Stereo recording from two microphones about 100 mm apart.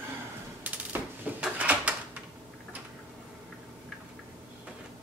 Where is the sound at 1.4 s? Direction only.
15° right (ahead or behind).